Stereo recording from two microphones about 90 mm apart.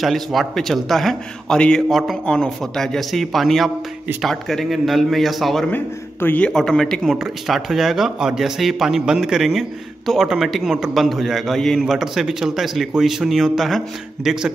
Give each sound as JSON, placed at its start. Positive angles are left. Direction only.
{"t": 0.0, "sound": "speech", "side_deg": 0}
{"t": 6.2, "sound": "a man's voice", "side_deg": 15}
{"t": 6.5, "sound": "speech", "side_deg": 5}